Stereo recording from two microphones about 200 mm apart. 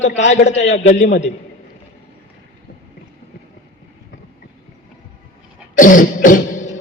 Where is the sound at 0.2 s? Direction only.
60° left (ahead or behind).